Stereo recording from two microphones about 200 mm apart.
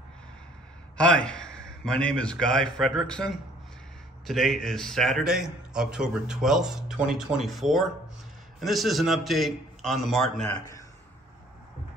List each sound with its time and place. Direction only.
0.9 s a man's voice: 5° left (ahead or behind)